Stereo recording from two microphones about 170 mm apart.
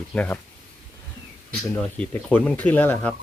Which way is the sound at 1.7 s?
10° left (ahead or behind).